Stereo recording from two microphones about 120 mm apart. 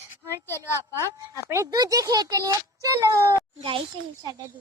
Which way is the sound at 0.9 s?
25° right (ahead or behind).